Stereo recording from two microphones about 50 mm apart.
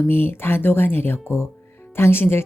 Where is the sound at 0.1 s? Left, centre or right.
Left.